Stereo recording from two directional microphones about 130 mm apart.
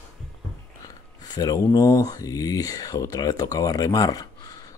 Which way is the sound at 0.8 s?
30° left (ahead or behind).